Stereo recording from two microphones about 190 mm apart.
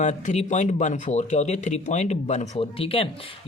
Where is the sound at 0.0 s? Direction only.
35° left (ahead or behind).